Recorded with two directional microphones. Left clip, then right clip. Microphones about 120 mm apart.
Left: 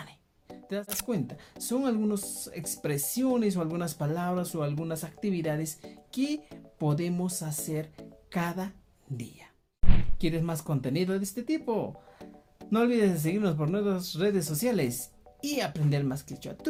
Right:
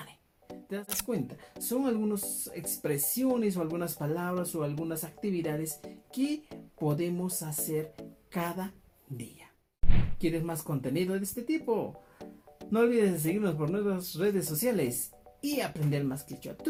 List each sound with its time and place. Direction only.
0.8 s speech: 25° left (ahead or behind)
3.2 s speech: 30° left (ahead or behind)
10.2 s speech: 30° left (ahead or behind)